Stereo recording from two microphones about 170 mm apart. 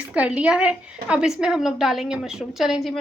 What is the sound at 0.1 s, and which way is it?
Speech, 10° right (ahead or behind).